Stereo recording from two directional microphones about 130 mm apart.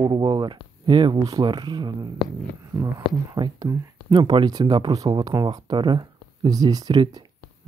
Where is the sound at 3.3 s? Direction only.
30° right (ahead or behind).